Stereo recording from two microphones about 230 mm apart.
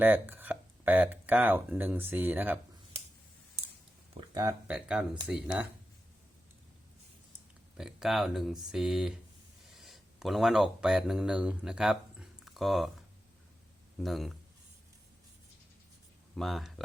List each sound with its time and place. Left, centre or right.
0.0 s speech: centre
4.2 s a sound: centre
4.7 s speech: centre
7.8 s speech: centre
14.0 s speech: centre
16.3 s speech: centre